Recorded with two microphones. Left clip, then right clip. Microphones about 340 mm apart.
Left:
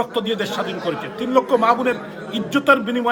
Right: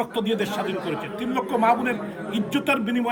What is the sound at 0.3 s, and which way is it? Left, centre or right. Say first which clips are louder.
A man's voice: left 3 dB; centre.